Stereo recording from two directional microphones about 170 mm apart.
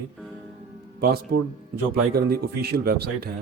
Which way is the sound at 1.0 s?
65° right (ahead or behind).